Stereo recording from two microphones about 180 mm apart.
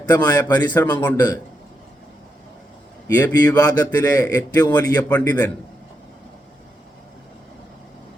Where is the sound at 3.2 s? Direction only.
10° left (ahead or behind).